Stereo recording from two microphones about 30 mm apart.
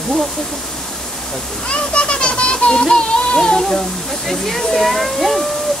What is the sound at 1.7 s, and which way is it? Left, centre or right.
Speech, left.